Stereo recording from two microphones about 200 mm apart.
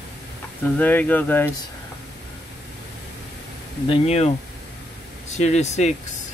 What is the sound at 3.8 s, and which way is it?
Speech, 30° left (ahead or behind).